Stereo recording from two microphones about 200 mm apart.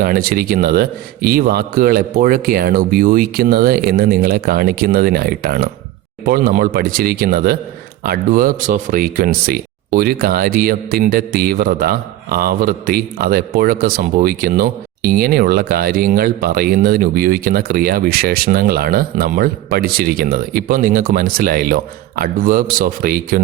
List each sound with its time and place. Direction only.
0.0 s speech: 45° right (ahead or behind)